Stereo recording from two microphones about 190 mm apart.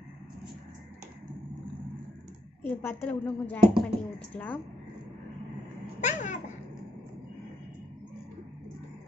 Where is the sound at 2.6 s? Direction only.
10° left (ahead or behind).